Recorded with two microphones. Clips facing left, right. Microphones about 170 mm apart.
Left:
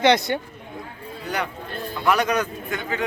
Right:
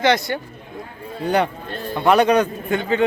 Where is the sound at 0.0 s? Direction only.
20° left (ahead or behind).